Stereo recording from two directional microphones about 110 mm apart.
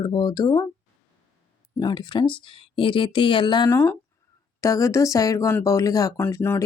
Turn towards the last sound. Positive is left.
turn(degrees=20)  # may be behind; listen again after turning